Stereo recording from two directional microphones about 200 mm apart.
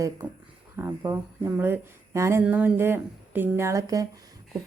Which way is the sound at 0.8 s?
10° right (ahead or behind).